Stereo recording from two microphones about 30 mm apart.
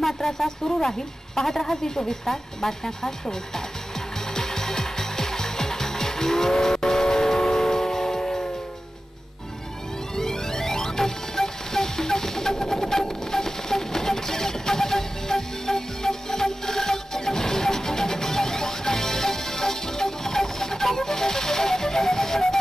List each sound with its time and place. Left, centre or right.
0.0 s speech: centre
4.3 s music: centre
10.1 s music: centre